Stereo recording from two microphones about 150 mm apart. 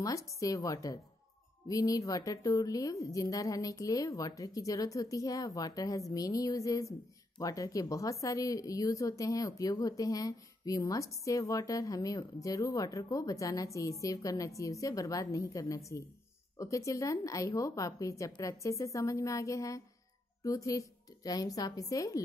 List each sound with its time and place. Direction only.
0.0 s a woman's voice: 20° left (ahead or behind)